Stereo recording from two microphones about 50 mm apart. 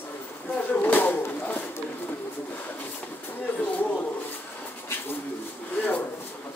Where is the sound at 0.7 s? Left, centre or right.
Left.